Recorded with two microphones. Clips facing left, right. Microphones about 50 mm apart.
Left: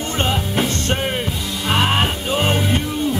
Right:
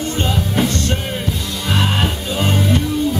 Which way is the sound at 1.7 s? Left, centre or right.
Left.